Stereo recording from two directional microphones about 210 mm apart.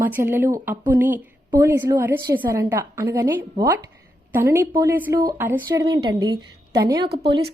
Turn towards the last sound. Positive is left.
turn(degrees=-25)  # may be behind; listen again after turning